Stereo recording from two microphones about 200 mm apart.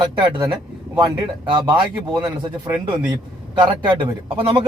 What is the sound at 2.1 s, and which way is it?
Speech, 20° right (ahead or behind).